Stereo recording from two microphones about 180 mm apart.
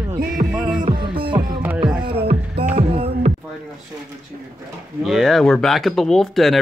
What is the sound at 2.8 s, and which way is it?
Music, 35° right (ahead or behind).